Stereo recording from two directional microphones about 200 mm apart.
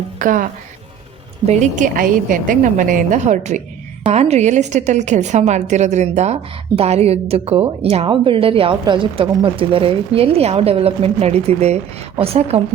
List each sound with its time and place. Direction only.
0.2 s speech: 40° right (ahead or behind)
1.5 s a woman's voice: 35° right (ahead or behind)